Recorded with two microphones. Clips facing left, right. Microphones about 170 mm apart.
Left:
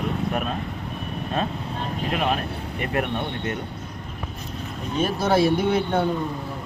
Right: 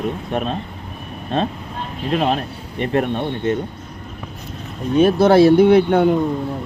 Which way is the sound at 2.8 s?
30° right (ahead or behind).